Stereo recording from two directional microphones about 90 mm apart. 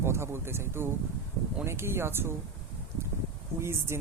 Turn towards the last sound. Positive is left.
turn(degrees=-30)  # may be behind; listen again after turning